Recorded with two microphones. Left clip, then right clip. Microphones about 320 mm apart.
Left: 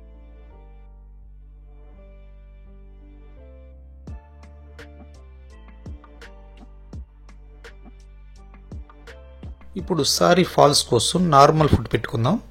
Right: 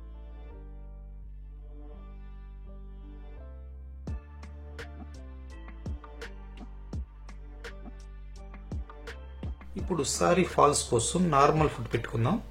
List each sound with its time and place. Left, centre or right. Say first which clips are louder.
4.0 s music: even; centre
9.8 s speech: left 9 dB; left